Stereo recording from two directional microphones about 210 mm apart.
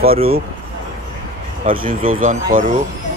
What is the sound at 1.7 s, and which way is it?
Speech, 40° right (ahead or behind).